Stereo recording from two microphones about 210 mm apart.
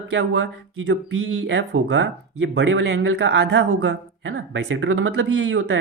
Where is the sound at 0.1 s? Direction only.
55° right (ahead or behind).